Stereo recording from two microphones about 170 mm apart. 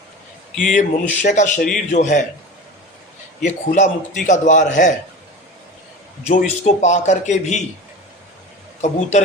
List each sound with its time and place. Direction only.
0.5 s speech: centre (ahead or behind)
0.8 s a man's voice: 45° left (ahead or behind)
3.4 s a man's voice: 45° left (ahead or behind)
6.2 s a man's voice: 40° left (ahead or behind)
8.8 s a man's voice: 45° left (ahead or behind)